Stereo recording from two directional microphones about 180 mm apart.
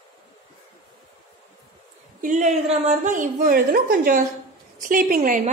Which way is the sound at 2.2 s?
45° right (ahead or behind).